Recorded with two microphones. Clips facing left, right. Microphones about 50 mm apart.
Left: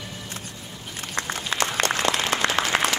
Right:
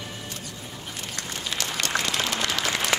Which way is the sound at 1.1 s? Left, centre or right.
Left.